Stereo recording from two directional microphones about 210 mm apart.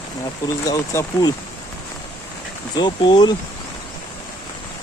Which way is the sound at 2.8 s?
20° left (ahead or behind).